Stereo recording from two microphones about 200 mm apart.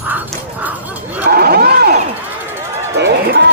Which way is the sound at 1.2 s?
50° right (ahead or behind).